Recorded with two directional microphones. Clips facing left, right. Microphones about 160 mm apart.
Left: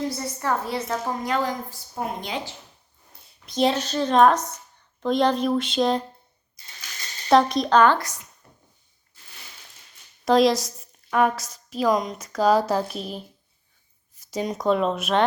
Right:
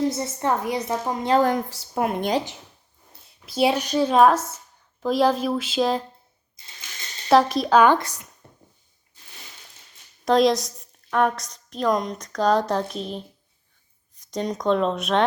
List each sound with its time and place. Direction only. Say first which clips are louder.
0.1 s a woman's voice: right 2 dB; 20° right (ahead or behind)
1.5 s a woman's voice: right 7 dB; 75° right (ahead or behind)
3.4 s a woman's voice: right 1 dB; 5° right (ahead or behind)
7.3 s a woman's voice: right 1 dB; centre (ahead or behind)
8.4 s a sound: right 3 dB; 30° right (ahead or behind)
10.2 s a woman's voice: even; centre (ahead or behind)